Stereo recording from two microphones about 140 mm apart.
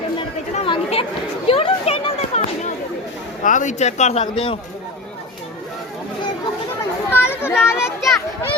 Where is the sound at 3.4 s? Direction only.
65° left (ahead or behind); by 4.5 s 45° left (ahead or behind).